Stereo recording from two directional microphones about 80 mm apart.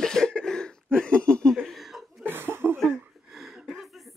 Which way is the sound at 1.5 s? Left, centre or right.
Centre.